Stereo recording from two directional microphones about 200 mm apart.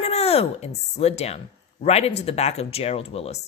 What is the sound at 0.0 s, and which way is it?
Speech, 30° left (ahead or behind).